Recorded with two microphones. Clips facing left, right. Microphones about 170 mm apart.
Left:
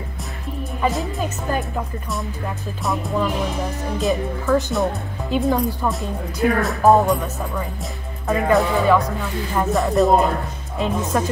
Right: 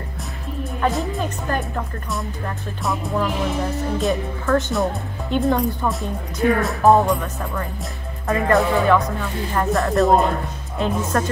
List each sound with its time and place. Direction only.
0.8 s speech: centre (ahead or behind)